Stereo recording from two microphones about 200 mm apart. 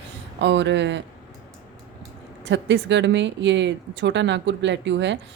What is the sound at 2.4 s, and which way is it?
Speech, 65° right (ahead or behind).